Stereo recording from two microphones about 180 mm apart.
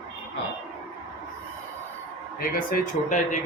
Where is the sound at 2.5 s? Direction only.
45° left (ahead or behind).